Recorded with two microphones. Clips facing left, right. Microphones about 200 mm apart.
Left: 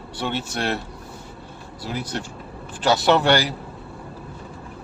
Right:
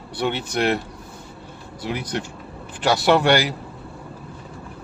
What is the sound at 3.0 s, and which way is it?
Speech, 10° right (ahead or behind).